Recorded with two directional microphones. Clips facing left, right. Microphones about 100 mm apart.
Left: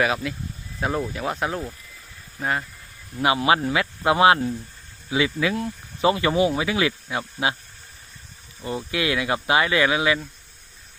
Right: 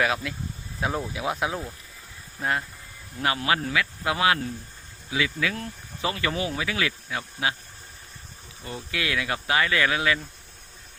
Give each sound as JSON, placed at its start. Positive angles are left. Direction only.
{"t": 0.0, "sound": "speech", "side_deg": 0}
{"t": 3.2, "sound": "speech", "side_deg": 15}
{"t": 8.9, "sound": "speech", "side_deg": 20}